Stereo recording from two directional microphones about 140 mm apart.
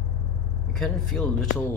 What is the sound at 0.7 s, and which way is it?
Speech, 5° left (ahead or behind).